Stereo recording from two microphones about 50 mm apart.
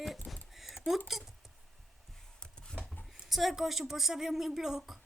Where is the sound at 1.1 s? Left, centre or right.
Centre.